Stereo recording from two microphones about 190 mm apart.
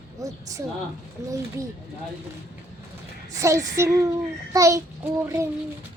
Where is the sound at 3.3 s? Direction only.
15° right (ahead or behind).